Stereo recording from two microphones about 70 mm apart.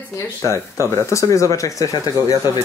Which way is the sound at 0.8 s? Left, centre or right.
Left.